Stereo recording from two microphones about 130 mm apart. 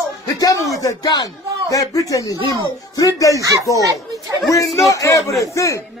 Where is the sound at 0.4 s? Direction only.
25° left (ahead or behind).